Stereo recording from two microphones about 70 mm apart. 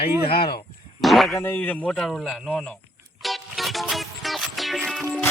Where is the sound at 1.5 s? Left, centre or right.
Left.